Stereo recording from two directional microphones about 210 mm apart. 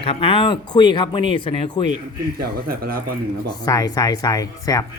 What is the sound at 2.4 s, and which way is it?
Speech, 45° right (ahead or behind).